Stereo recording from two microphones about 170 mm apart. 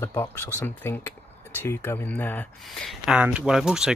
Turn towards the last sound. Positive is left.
turn(degrees=-5)  # may be behind; listen again after turning